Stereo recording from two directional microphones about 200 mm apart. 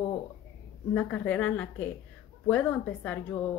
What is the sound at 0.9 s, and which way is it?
Speech, 5° left (ahead or behind).